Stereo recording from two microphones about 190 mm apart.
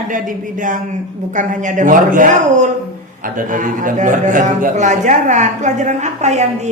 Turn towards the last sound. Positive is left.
turn(degrees=-35)  # may be behind; listen again after turning